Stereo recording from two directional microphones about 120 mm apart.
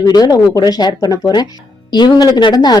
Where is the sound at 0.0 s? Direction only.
35° left (ahead or behind).